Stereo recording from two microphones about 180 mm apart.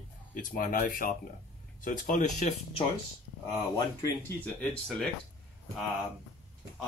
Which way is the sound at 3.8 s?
15° left (ahead or behind).